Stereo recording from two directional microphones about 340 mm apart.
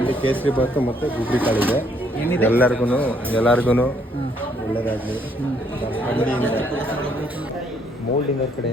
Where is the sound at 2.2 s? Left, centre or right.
Centre.